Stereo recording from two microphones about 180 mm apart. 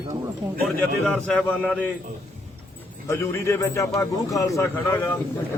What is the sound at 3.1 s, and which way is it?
A man's voice, 15° left (ahead or behind).